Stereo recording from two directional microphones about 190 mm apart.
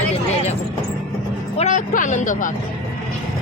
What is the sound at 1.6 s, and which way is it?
Speech, 40° left (ahead or behind).